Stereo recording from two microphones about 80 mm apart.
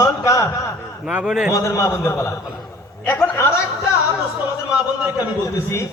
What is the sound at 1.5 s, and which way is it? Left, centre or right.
A man's voice, left.